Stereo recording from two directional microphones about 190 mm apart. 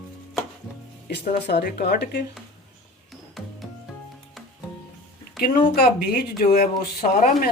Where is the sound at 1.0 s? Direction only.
55° left (ahead or behind).